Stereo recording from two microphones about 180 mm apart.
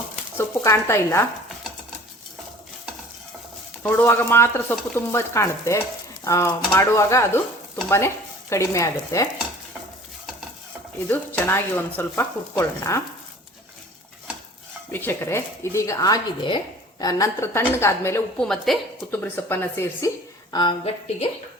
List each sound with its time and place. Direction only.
0.3 s speech: 15° left (ahead or behind)
3.8 s speech: 10° left (ahead or behind)
11.1 s speech: 10° left (ahead or behind)
14.9 s speech: 15° left (ahead or behind)
18.3 s a woman's voice: 5° left (ahead or behind)
19.1 s speech: 10° left (ahead or behind)
20.5 s speech: 25° left (ahead or behind)